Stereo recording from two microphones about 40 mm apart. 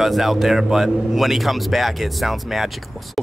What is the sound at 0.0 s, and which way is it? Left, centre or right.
A man's voice, centre.